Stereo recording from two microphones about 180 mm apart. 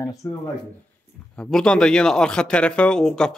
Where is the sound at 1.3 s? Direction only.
5° left (ahead or behind).